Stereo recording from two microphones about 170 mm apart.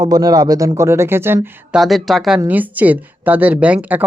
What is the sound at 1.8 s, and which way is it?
Speech, centre (ahead or behind).